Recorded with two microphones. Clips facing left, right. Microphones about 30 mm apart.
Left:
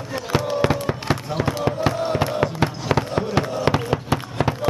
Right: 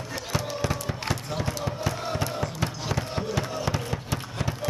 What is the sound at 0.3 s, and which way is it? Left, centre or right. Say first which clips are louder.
Fireworks: left 9 dB; left.